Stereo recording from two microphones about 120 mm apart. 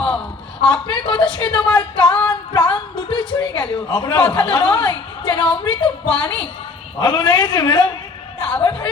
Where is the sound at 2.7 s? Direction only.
40° left (ahead or behind).